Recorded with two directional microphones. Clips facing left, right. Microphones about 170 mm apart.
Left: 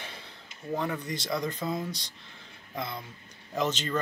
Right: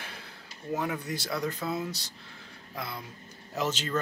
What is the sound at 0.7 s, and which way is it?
Speech, 10° right (ahead or behind).